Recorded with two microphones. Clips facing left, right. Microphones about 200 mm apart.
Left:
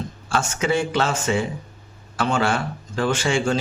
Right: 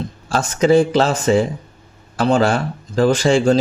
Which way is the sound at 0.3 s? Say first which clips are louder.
Right 8 dB; 35° right (ahead or behind).